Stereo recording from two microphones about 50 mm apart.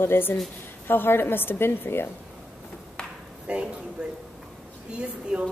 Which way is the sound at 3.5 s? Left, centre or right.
Right.